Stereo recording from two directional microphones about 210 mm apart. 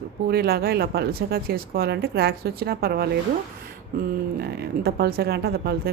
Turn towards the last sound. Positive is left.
turn(degrees=-45)  # may be behind; listen again after turning